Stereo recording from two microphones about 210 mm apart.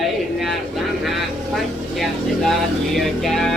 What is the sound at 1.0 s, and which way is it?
Vehicle, centre (ahead or behind).